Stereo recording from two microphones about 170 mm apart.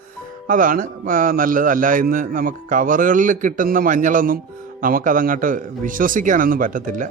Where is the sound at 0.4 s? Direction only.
55° right (ahead or behind).